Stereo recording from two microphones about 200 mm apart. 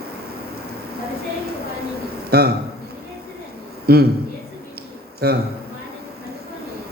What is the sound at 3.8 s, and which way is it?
Speech, 50° right (ahead or behind).